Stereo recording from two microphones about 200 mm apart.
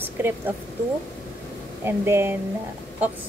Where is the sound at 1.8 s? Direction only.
10° right (ahead or behind).